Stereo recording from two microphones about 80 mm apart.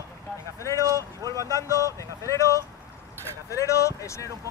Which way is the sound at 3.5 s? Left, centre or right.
Left.